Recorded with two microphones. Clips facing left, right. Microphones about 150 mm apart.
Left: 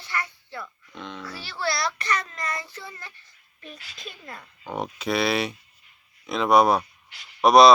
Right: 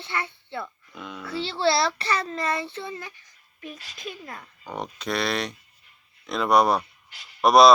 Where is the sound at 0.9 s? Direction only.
5° right (ahead or behind).